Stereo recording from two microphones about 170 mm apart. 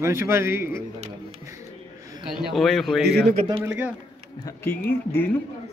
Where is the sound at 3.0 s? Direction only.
75° right (ahead or behind).